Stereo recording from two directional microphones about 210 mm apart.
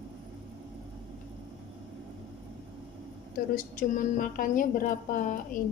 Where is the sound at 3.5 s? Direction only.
40° left (ahead or behind).